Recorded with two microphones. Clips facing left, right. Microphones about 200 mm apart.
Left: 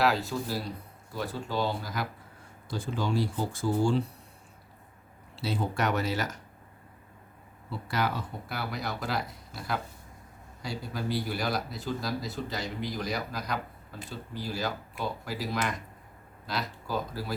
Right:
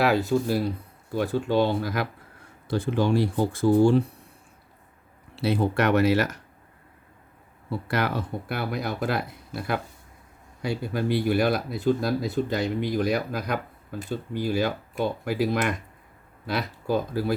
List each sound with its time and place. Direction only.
0.0 s speech: 55° right (ahead or behind)
5.4 s speech: 60° right (ahead or behind)
7.7 s speech: 60° right (ahead or behind)